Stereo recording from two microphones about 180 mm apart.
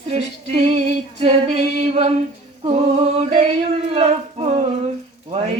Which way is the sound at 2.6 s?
35° right (ahead or behind).